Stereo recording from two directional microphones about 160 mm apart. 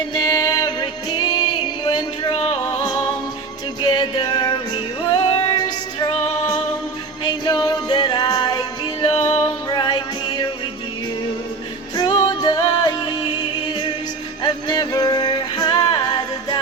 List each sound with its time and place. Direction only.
0.1 s music: 25° left (ahead or behind)
1.8 s music: 35° left (ahead or behind)
3.8 s music: 25° left (ahead or behind)
7.3 s music: 25° left (ahead or behind)
9.2 s music: 45° left (ahead or behind)
9.7 s music: 25° left (ahead or behind)
11.9 s music: 25° left (ahead or behind)
14.4 s music: 25° left (ahead or behind)